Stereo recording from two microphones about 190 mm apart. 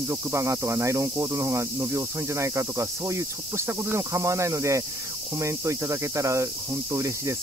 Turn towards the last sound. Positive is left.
turn(degrees=-15)  # may be behind; listen again after turning